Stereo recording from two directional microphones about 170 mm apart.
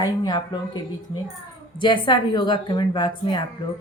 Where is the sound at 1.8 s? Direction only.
25° left (ahead or behind).